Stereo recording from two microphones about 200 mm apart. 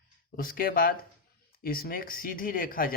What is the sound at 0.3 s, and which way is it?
Speech, 45° left (ahead or behind).